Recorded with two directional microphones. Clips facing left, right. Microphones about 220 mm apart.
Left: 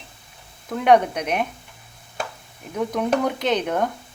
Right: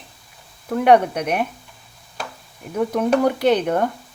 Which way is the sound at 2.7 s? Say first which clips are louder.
Right 3 dB; 5° right (ahead or behind).